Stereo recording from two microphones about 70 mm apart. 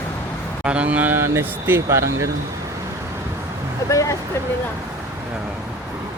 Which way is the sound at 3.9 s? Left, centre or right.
Left.